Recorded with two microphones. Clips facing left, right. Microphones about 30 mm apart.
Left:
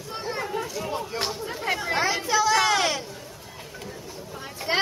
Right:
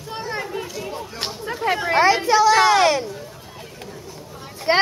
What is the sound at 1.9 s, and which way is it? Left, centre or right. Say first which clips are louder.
Speech: right 9 dB; right.